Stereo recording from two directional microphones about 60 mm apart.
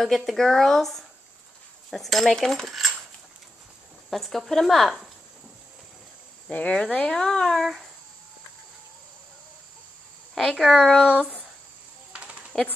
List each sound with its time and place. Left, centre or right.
0.0 s speech: centre
4.1 s speech: centre
6.5 s speech: centre
10.3 s speech: centre
12.1 s a sound: centre